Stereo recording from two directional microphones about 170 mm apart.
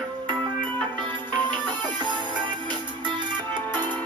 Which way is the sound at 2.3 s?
25° right (ahead or behind).